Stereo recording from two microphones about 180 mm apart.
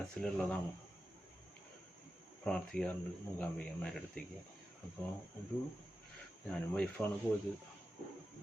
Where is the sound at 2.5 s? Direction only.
5° left (ahead or behind).